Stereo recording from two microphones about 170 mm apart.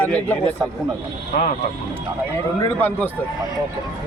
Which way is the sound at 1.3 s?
50° left (ahead or behind).